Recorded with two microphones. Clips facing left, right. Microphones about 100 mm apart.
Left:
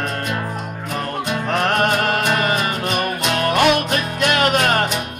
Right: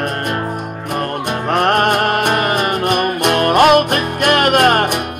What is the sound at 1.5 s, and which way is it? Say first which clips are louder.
Music: right 5 dB; 55° right (ahead or behind).